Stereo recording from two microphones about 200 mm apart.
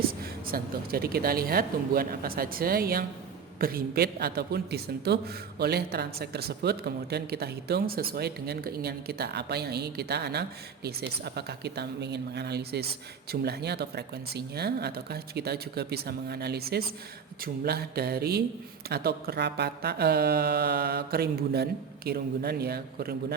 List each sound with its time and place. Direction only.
0.4 s a woman's voice: 50° right (ahead or behind)